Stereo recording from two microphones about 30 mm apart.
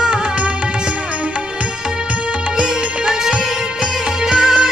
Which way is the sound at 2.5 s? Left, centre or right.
Right.